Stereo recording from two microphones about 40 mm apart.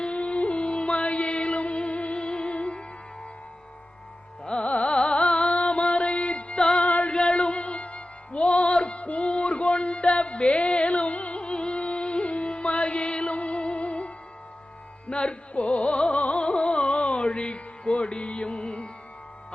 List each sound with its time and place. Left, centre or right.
0.0 s music: left
4.4 s carnatic music: left
4.7 s music: left
6.8 s female singing: left
7.3 s music: left
15.1 s music: left